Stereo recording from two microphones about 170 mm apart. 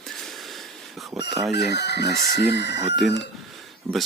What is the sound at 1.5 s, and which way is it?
Chicken, 80° left.